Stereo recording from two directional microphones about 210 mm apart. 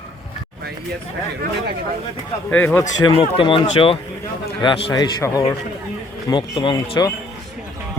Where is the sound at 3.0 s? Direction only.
20° left (ahead or behind).